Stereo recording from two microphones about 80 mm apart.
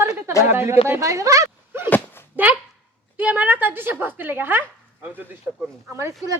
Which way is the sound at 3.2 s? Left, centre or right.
Centre.